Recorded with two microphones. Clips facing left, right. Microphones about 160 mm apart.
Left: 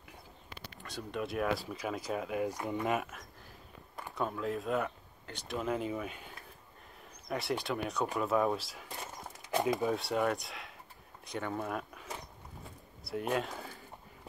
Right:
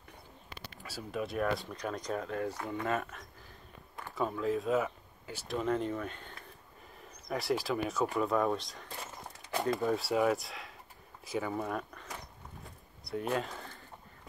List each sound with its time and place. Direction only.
0.8 s speech: 5° right (ahead or behind); by 3.0 s 15° left (ahead or behind)
3.0 s speech: 5° left (ahead or behind)
9.5 s speech: 15° left (ahead or behind)
9.8 s speech: centre (ahead or behind)